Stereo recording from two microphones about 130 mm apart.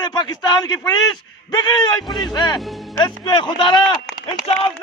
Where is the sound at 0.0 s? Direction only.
30° left (ahead or behind).